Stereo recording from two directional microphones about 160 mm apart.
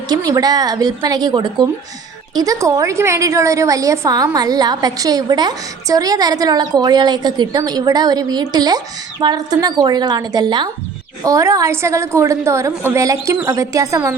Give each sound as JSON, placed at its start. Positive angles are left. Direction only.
{"t": 0.1, "sound": "a woman's voice", "side_deg": -20}